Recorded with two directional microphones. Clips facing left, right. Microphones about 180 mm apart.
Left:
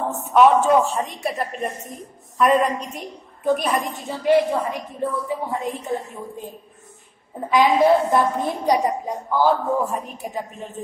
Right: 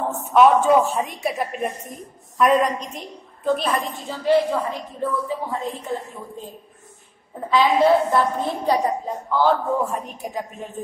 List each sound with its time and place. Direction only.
0.3 s a woman's voice: centre (ahead or behind); by 6.4 s 15° left (ahead or behind)
7.4 s a woman's voice: 15° left (ahead or behind)